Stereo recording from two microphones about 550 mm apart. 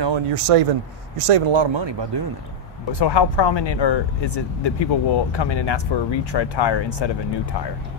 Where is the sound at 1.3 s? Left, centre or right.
Right.